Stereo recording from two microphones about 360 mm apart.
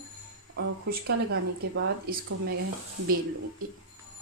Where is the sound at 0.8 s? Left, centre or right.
Right.